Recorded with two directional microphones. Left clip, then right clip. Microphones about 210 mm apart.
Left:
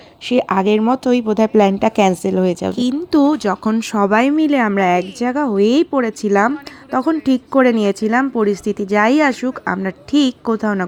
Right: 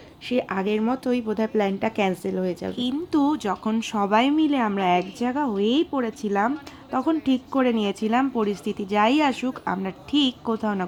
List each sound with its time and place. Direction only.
0.3 s speech: 35° left (ahead or behind)